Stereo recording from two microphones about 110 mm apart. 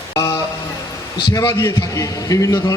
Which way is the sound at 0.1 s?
30° left (ahead or behind).